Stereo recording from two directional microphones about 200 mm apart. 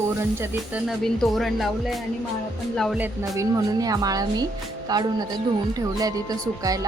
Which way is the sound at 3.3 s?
20° right (ahead or behind).